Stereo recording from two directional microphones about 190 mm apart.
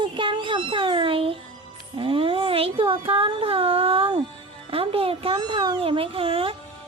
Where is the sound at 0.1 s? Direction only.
25° right (ahead or behind).